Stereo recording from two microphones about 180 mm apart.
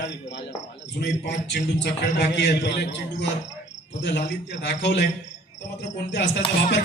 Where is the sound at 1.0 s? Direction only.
70° left (ahead or behind).